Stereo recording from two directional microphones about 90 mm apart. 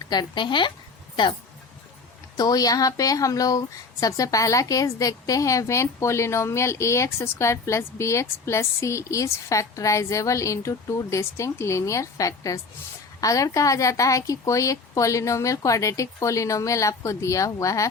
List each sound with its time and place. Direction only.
0.1 s a woman's voice: 55° left (ahead or behind)
2.3 s a woman's voice: 45° left (ahead or behind)